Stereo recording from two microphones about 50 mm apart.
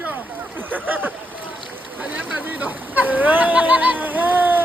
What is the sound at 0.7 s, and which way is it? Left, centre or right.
Speech, right.